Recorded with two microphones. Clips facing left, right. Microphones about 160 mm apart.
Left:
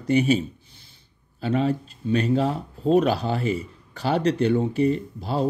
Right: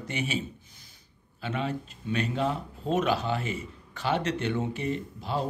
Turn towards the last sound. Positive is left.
turn(degrees=40)  # may be behind; listen again after turning